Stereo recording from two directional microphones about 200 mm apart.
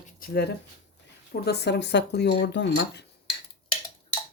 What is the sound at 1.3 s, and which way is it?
Speech, 55° left (ahead or behind).